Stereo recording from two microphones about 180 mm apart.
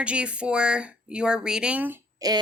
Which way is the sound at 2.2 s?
20° right (ahead or behind).